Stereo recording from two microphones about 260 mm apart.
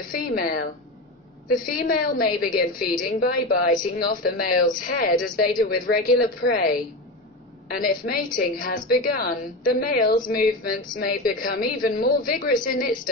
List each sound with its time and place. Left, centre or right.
0.0 s a woman's voice: left
1.7 s a woman's voice: left